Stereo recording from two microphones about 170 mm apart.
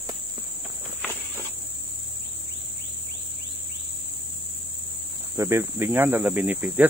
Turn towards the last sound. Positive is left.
turn(degrees=-10)  # may be behind; listen again after turning